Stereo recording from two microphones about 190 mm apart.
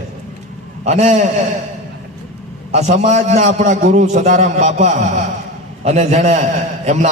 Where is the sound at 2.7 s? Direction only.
35° right (ahead or behind).